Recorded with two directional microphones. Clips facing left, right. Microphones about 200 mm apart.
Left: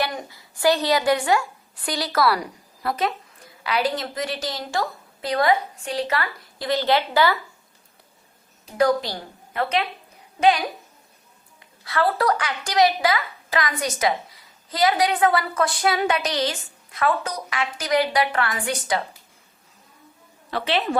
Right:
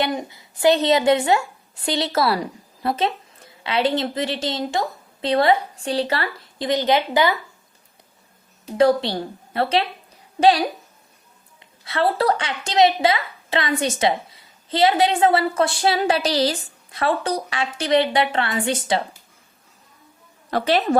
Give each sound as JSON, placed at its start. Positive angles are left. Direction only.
{"t": 0.0, "sound": "a woman's voice", "side_deg": -20}
{"t": 6.7, "sound": "a woman's voice", "side_deg": -20}
{"t": 8.8, "sound": "a woman's voice", "side_deg": -30}
{"t": 11.9, "sound": "a woman's voice", "side_deg": -25}
{"t": 20.5, "sound": "a woman's voice", "side_deg": -40}